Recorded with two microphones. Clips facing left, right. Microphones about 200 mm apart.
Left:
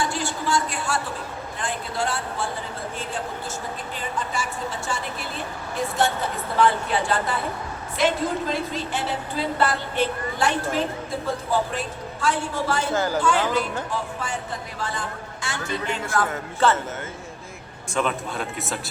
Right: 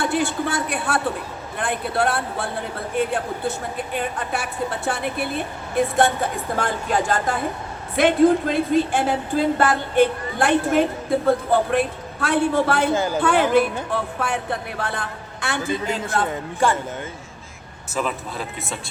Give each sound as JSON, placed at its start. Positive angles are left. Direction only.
{"t": 0.0, "sound": "a woman's voice", "side_deg": -55}
{"t": 6.6, "sound": "speech", "side_deg": -45}
{"t": 7.9, "sound": "a woman's voice", "side_deg": -55}
{"t": 12.9, "sound": "speech", "side_deg": -15}
{"t": 13.1, "sound": "a woman's voice", "side_deg": -60}
{"t": 16.0, "sound": "a man's voice", "side_deg": -20}
{"t": 17.9, "sound": "speech", "side_deg": 0}